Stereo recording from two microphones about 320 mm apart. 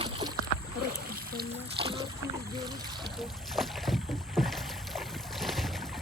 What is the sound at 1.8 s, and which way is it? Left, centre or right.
Boat, centre.